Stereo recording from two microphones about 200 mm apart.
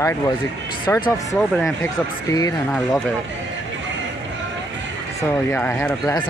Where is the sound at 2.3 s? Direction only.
15° left (ahead or behind).